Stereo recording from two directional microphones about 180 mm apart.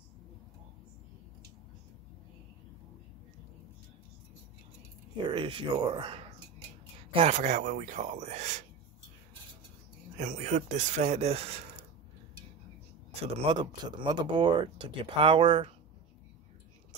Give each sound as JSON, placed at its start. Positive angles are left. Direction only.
{"t": 5.1, "sound": "speech", "side_deg": -25}
{"t": 7.2, "sound": "speech", "side_deg": -40}
{"t": 10.1, "sound": "speech", "side_deg": -40}
{"t": 13.2, "sound": "speech", "side_deg": -30}